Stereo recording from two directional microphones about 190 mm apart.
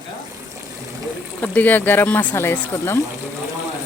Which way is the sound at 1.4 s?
10° left (ahead or behind).